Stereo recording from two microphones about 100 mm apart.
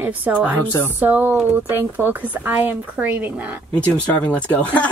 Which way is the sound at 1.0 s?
20° right (ahead or behind).